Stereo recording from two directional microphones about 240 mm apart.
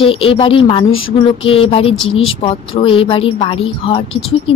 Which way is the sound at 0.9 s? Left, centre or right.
Left.